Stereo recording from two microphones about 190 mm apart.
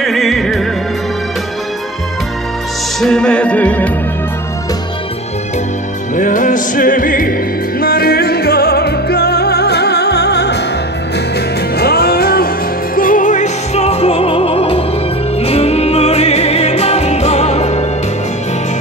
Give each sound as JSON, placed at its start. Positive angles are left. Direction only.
{"t": 0.0, "sound": "music", "side_deg": 0}
{"t": 3.0, "sound": "music", "side_deg": 5}
{"t": 6.1, "sound": "music", "side_deg": 40}
{"t": 11.8, "sound": "music", "side_deg": 55}